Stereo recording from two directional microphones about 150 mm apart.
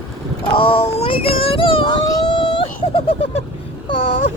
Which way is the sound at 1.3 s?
40° left (ahead or behind).